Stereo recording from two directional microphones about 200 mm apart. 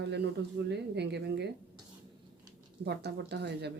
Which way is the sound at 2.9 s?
55° right (ahead or behind).